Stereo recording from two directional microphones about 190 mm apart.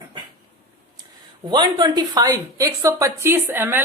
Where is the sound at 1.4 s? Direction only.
25° right (ahead or behind).